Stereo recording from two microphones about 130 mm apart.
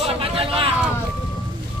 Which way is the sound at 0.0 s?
45° right (ahead or behind).